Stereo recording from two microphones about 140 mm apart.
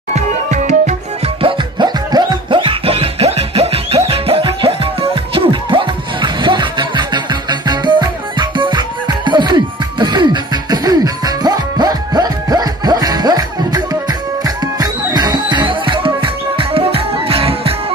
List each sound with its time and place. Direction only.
0.1 s music: 55° right (ahead or behind)
1.4 s music: 30° right (ahead or behind)